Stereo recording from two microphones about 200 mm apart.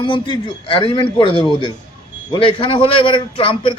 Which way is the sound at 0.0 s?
25° left (ahead or behind).